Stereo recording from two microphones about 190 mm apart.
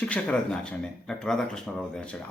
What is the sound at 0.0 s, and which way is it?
Speech, 5° left (ahead or behind).